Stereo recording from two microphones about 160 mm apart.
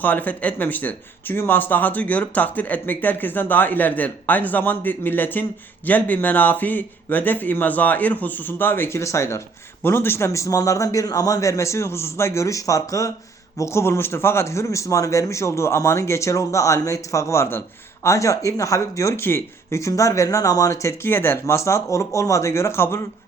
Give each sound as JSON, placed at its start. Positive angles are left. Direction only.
{"t": 0.0, "sound": "speech", "side_deg": 10}